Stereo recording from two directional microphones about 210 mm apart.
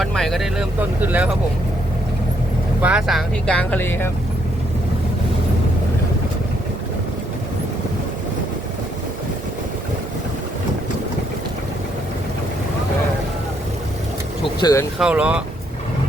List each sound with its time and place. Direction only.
0.0 s speech: centre (ahead or behind)
2.8 s speech: 5° right (ahead or behind)
14.4 s vehicle: 15° left (ahead or behind)
14.9 s speech: 5° right (ahead or behind)